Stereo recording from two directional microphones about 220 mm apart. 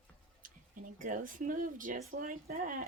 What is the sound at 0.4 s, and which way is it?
Speech, 40° right (ahead or behind).